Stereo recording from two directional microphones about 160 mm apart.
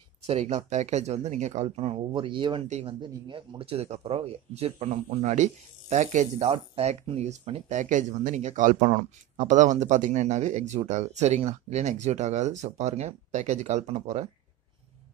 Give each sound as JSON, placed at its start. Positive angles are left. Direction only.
{"t": 0.3, "sound": "speech", "side_deg": -45}